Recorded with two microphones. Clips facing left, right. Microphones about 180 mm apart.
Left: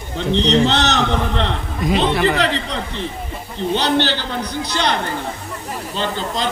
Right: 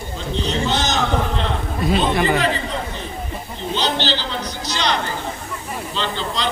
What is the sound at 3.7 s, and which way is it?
A man's voice, 60° left (ahead or behind).